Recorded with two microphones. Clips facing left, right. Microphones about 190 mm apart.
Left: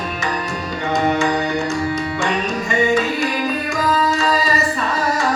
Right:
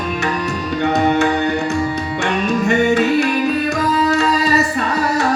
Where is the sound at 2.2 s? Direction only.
65° right (ahead or behind).